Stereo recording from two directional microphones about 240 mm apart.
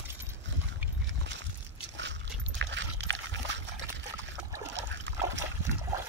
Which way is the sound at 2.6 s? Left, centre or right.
Right.